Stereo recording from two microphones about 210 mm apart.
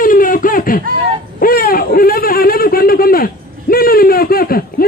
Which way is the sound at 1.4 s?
45° left (ahead or behind).